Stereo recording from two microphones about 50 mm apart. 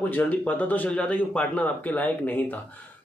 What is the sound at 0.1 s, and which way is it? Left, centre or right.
Speech, left.